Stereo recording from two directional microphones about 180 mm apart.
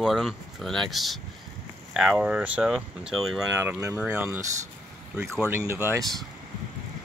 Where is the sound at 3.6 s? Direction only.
10° right (ahead or behind).